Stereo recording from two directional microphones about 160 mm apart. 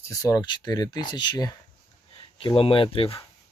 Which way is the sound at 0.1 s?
20° left (ahead or behind).